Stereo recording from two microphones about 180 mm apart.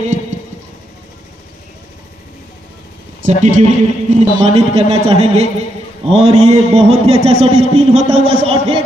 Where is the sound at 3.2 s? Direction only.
45° right (ahead or behind).